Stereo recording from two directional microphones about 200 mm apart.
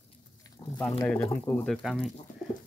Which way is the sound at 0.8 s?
5° left (ahead or behind).